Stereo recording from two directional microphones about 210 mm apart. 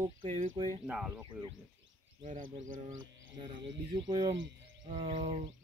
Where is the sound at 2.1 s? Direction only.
35° right (ahead or behind).